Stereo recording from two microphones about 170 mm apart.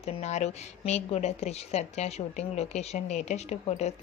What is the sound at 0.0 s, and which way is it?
Speech, 40° left (ahead or behind).